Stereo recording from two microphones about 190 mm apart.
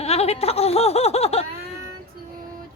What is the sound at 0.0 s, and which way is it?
Speech, 35° left (ahead or behind).